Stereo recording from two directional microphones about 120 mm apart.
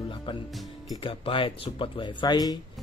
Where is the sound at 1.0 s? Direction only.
45° left (ahead or behind).